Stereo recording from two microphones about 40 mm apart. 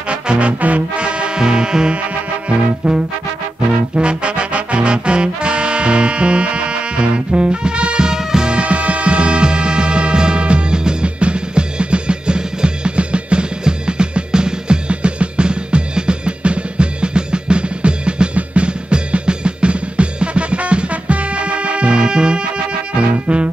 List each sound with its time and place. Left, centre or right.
0.1 s music: right
0.9 s music: right
3.9 s music: right
8.5 s music: right